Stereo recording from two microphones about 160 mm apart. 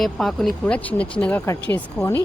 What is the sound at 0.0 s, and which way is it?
Speech, centre (ahead or behind).